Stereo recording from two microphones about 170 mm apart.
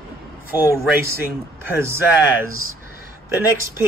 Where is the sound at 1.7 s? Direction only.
15° right (ahead or behind).